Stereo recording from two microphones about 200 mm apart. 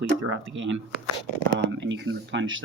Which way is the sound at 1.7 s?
65° right (ahead or behind).